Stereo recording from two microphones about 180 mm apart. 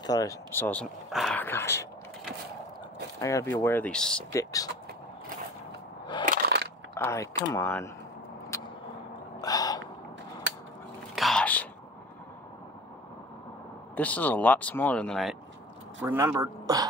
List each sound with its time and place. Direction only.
0.0 s speech: 20° left (ahead or behind)
3.2 s speech: 15° left (ahead or behind)
4.3 s speech: 20° left (ahead or behind)
6.2 s a sound: 60° right (ahead or behind)
7.0 s speech: 15° left (ahead or behind)
8.5 s vehicle: 15° left (ahead or behind)
9.4 s gasp: 20° left (ahead or behind)
11.1 s whispering: centre (ahead or behind)
13.9 s speech: 10° left (ahead or behind)
16.0 s speech: 15° right (ahead or behind)